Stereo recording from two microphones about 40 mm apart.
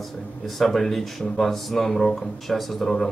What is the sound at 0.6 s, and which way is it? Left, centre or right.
Speech, centre.